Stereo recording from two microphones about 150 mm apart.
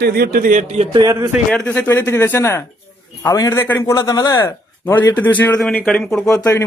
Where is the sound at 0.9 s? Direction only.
25° right (ahead or behind).